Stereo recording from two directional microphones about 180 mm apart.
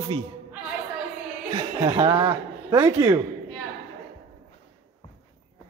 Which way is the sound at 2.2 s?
20° right (ahead or behind).